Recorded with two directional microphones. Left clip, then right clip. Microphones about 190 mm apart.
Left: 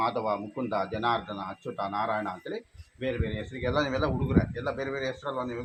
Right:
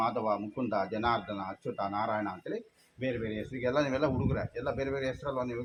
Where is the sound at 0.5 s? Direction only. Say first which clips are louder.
Left 2 dB; 5° right (ahead or behind).